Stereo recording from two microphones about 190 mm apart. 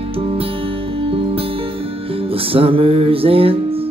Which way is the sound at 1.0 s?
30° right (ahead or behind).